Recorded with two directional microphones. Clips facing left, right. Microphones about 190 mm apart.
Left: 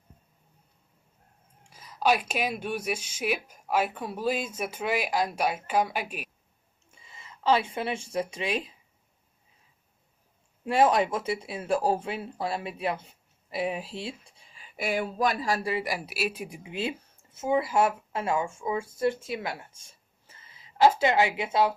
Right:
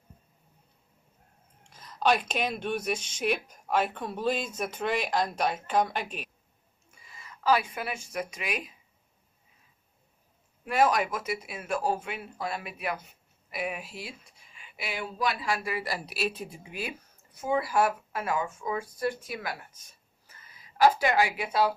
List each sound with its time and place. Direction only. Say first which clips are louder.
1.7 s speech: left 1 dB; 5° left (ahead or behind)
6.9 s a woman's voice: even; 25° left (ahead or behind)
10.6 s speech: left 3 dB; 25° left (ahead or behind)
15.7 s speech: left 3 dB; 15° left (ahead or behind)
16.0 s a woman's voice: left 1 dB; 5° left (ahead or behind); by 21.7 s 20° left (ahead or behind)